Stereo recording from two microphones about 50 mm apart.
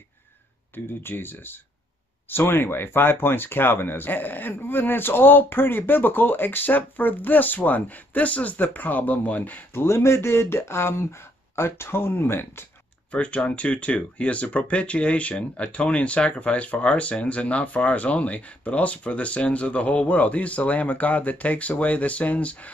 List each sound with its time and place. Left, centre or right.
0.7 s speech: left
9.8 s speech: left
13.1 s speech: left